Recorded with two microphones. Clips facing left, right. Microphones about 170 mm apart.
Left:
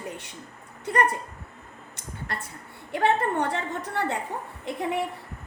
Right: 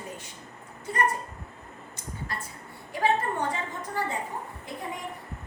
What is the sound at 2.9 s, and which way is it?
A woman's voice, 65° left (ahead or behind).